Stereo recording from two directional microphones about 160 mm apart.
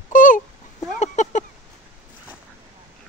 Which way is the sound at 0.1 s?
55° left (ahead or behind).